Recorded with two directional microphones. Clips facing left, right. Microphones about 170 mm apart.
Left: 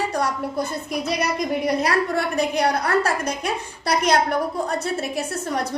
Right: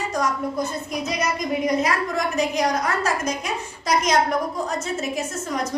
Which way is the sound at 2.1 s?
60° left (ahead or behind).